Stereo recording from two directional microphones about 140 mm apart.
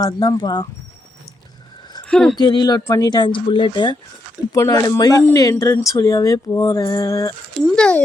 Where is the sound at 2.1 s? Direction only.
5° left (ahead or behind).